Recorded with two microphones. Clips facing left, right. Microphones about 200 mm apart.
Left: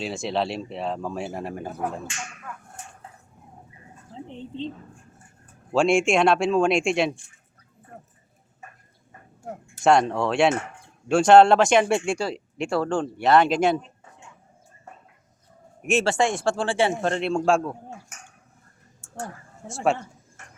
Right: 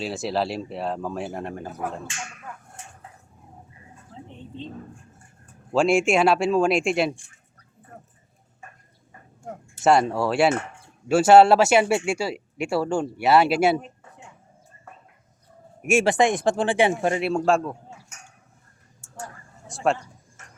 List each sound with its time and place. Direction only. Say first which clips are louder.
0.0 s speech: right 1 dB; centre (ahead or behind)
4.1 s a sound: left 4 dB; 20° left (ahead or behind)
5.7 s speech: even; 5° right (ahead or behind)
9.8 s speech: even; 5° right (ahead or behind)
15.8 s speech: right 2 dB; 10° right (ahead or behind)
19.0 s a sound: left 3 dB; 60° left (ahead or behind)